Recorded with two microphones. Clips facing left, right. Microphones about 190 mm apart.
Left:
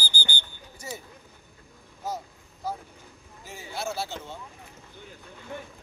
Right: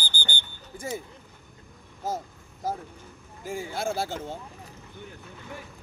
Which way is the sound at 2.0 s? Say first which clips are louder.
Right 2 dB; 50° right (ahead or behind).